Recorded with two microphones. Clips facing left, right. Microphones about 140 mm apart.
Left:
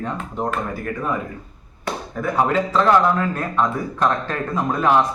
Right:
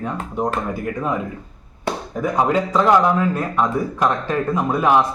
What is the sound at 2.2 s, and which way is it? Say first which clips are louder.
Speech: right 1 dB; 15° right (ahead or behind).